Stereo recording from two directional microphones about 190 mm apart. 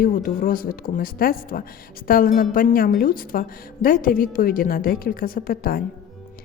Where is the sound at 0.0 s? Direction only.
50° left (ahead or behind).